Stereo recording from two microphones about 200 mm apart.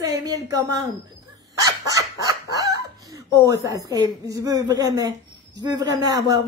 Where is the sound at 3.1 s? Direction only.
15° right (ahead or behind).